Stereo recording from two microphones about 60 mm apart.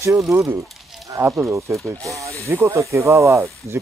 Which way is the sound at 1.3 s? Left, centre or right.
Right.